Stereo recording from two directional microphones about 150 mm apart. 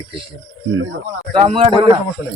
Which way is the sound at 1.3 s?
35° right (ahead or behind).